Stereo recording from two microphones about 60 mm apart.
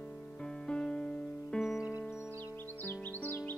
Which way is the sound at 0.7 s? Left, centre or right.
Centre.